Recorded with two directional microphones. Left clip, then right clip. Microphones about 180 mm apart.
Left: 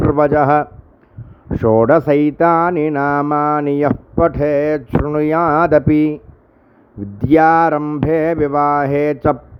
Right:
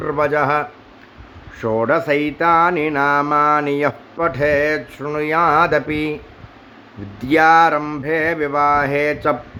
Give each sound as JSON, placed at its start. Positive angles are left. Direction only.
{"t": 0.1, "sound": "mantra", "side_deg": 45}
{"t": 7.2, "sound": "mantra", "side_deg": 50}